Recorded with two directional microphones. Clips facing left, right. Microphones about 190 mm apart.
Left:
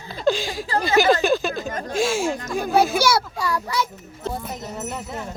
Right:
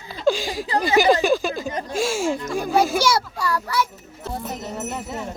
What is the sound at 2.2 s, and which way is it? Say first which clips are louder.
Speech: right 1 dB; 50° right (ahead or behind).